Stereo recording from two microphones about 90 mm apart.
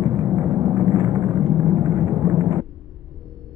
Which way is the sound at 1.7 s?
40° right (ahead or behind).